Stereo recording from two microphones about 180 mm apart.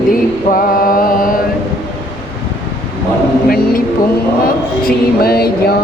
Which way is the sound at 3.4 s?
55° left (ahead or behind).